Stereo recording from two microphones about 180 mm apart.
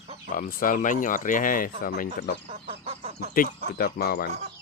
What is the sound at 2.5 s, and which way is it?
Speech, 35° right (ahead or behind).